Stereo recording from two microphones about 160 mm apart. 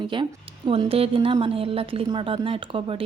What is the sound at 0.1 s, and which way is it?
Speech, 30° right (ahead or behind).